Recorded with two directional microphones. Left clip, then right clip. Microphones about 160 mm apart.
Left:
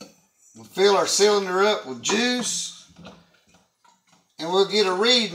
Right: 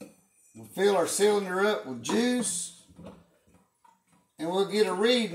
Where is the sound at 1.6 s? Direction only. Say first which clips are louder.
Left 6 dB; 10° right (ahead or behind).